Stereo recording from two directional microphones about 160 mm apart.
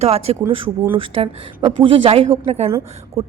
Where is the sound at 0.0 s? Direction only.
40° right (ahead or behind).